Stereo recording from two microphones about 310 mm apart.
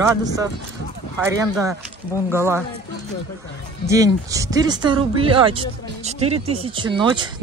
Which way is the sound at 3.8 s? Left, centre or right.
Centre.